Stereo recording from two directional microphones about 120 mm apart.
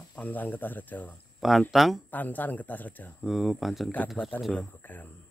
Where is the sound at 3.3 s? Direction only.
Centre (ahead or behind).